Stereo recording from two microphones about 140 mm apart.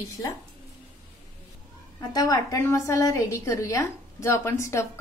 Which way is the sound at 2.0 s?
25° left (ahead or behind).